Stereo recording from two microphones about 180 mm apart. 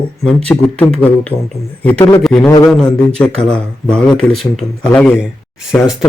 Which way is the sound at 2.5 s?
15° left (ahead or behind).